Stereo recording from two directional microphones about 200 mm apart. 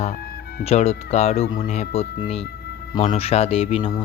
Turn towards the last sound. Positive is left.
turn(degrees=30)  # may be behind; listen again after turning